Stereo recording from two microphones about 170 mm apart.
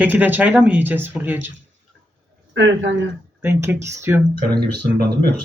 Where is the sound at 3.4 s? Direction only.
15° right (ahead or behind).